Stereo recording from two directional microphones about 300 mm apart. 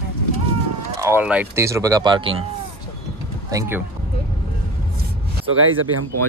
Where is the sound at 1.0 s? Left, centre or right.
Centre.